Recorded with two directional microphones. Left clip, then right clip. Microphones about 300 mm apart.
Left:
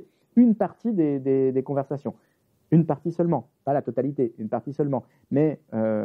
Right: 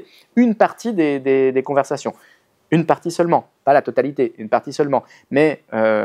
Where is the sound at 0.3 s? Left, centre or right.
Centre.